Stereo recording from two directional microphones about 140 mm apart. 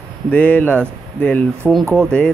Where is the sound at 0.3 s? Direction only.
10° left (ahead or behind).